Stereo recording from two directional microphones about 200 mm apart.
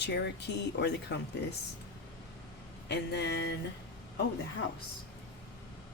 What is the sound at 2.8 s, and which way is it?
Speech, 55° left (ahead or behind).